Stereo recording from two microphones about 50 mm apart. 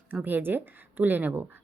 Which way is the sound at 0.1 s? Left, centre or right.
Right.